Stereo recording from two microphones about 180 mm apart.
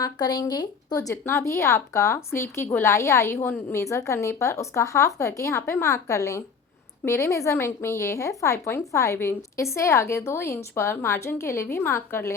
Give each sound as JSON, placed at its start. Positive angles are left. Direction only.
{"t": 0.0, "sound": "a woman's voice", "side_deg": 20}